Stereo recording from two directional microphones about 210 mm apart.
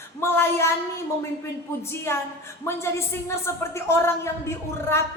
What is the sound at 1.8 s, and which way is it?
Speech, 10° left (ahead or behind).